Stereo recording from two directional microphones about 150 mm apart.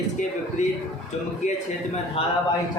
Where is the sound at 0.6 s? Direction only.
55° left (ahead or behind).